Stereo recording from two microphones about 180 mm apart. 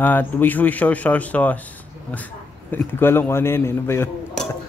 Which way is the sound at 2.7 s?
10° left (ahead or behind).